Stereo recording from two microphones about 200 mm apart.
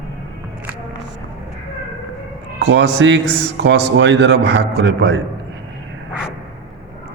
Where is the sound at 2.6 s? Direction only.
60° right (ahead or behind).